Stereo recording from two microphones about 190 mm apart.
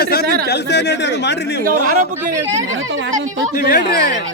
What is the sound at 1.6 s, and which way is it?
Speech, 45° right (ahead or behind).